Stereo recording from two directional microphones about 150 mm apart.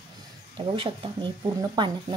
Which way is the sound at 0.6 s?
35° right (ahead or behind).